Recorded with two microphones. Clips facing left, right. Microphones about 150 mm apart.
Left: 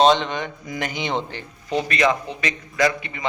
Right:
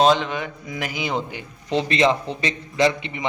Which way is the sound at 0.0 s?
5° right (ahead or behind).